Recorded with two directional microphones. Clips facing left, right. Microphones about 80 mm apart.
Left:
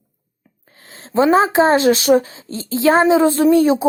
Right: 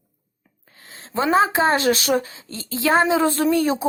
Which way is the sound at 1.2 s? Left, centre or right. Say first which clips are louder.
Left 5 dB; left.